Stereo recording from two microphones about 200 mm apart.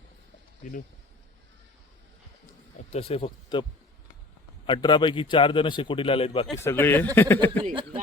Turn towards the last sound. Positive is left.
turn(degrees=10)  # may be behind; listen again after turning